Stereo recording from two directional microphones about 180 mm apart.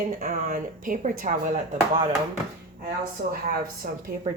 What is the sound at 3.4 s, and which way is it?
Speech, 55° right (ahead or behind).